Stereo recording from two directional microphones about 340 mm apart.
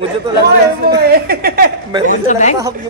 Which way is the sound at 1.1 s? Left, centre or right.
Right.